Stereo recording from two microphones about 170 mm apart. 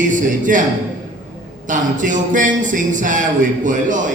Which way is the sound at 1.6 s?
50° right (ahead or behind).